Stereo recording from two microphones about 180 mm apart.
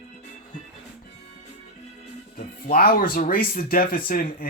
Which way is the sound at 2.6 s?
55° left (ahead or behind).